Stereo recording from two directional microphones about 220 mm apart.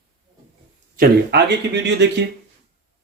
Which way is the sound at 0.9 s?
50° right (ahead or behind).